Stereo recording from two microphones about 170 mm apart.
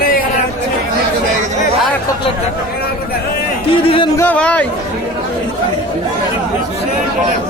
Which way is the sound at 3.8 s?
30° left (ahead or behind).